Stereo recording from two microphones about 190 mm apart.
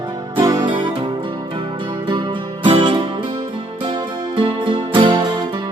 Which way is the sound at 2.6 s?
25° right (ahead or behind).